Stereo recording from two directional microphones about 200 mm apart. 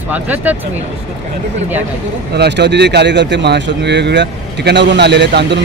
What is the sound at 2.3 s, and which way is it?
Speech, 55° right (ahead or behind).